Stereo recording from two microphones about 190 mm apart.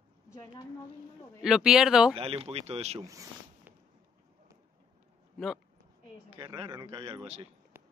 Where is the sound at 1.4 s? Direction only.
5° right (ahead or behind).